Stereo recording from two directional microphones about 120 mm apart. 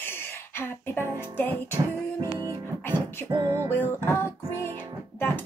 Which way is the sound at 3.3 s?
30° right (ahead or behind).